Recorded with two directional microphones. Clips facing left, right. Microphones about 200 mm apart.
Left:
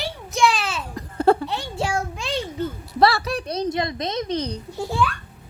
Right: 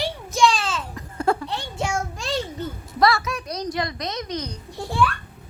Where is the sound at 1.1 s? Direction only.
30° left (ahead or behind).